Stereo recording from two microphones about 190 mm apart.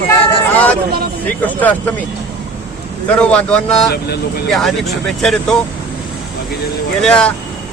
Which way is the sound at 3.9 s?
55° left (ahead or behind).